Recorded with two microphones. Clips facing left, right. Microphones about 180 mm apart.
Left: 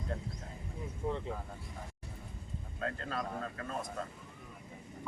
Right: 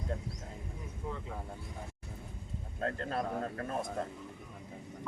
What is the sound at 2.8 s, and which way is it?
Speech, 40° right (ahead or behind).